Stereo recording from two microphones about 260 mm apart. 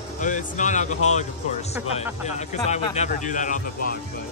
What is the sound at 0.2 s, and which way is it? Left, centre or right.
Speech, left.